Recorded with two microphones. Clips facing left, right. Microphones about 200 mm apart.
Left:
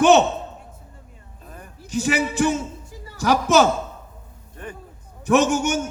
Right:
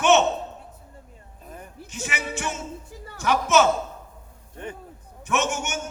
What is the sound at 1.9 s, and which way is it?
A man's voice, 35° left (ahead or behind).